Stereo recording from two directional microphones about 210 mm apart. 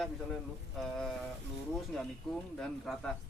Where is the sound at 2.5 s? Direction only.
5° left (ahead or behind).